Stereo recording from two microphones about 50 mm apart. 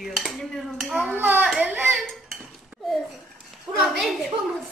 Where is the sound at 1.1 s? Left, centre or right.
Right.